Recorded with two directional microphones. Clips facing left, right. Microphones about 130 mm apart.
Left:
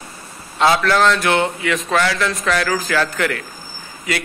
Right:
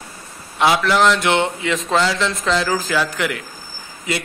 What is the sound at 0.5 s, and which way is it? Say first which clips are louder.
A man's voice: left 1 dB; 15° right (ahead or behind).